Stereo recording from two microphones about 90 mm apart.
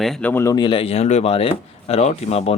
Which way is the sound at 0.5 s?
65° left (ahead or behind).